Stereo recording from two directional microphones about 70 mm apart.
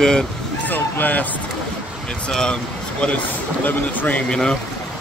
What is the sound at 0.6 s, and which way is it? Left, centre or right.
Speech, left.